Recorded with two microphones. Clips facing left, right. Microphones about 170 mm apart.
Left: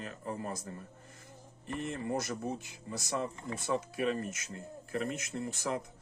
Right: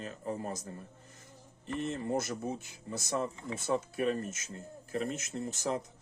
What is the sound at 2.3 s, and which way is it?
Speech, 50° right (ahead or behind).